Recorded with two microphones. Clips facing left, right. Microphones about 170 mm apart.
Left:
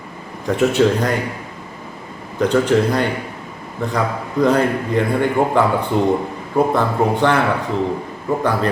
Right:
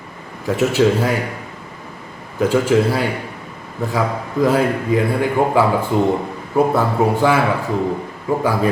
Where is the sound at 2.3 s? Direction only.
5° right (ahead or behind).